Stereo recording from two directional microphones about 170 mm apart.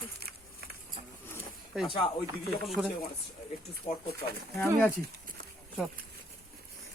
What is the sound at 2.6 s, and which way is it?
Speech, centre (ahead or behind).